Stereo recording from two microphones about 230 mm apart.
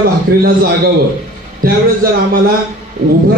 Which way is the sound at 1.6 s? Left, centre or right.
Right.